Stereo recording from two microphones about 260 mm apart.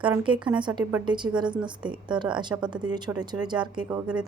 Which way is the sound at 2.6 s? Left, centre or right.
Centre.